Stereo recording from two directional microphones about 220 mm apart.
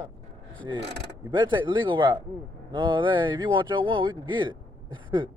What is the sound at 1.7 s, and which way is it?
Speech, 20° right (ahead or behind).